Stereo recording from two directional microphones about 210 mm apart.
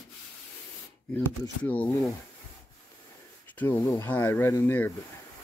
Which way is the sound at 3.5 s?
10° left (ahead or behind).